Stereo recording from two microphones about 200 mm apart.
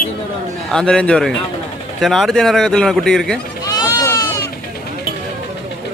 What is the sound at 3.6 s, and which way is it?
Goat, 20° left (ahead or behind).